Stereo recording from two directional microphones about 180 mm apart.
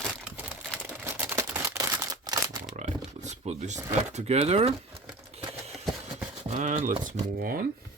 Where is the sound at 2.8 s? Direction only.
40° right (ahead or behind).